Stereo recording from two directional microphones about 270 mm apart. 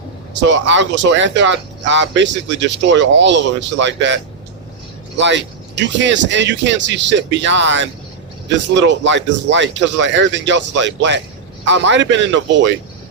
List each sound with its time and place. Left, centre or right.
0.4 s speech: right